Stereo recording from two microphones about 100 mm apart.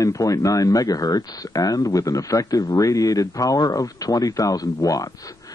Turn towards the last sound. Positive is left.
turn(degrees=40)  # may be behind; listen again after turning